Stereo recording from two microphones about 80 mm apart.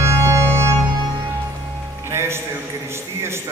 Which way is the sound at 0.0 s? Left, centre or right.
Right.